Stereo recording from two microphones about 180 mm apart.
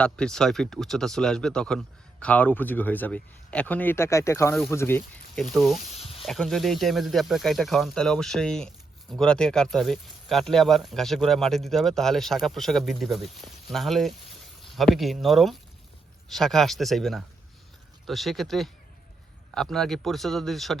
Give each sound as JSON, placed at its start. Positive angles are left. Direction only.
{"t": 0.0, "sound": "speech", "side_deg": 5}
{"t": 5.9, "sound": "snake", "side_deg": 30}
{"t": 6.2, "sound": "speech", "side_deg": 0}